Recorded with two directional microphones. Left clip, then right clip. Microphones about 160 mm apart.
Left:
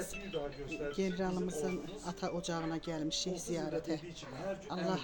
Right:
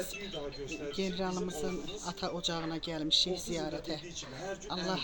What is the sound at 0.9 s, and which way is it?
Speech, 5° left (ahead or behind).